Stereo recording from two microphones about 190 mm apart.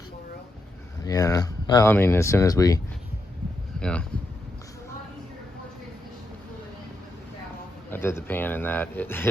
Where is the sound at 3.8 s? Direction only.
5° left (ahead or behind).